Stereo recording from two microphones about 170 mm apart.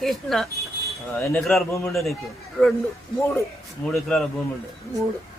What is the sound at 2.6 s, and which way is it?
Speech, 5° left (ahead or behind).